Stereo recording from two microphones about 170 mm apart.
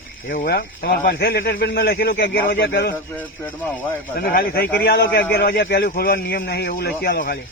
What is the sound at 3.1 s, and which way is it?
Speech, 15° left (ahead or behind).